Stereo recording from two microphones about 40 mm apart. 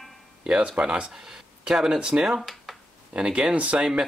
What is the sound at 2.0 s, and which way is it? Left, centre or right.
Speech, centre.